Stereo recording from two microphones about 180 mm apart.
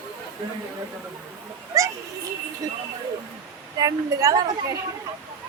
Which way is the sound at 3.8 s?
20° right (ahead or behind).